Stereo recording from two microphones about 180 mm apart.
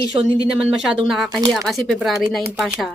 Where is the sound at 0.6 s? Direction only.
5° right (ahead or behind).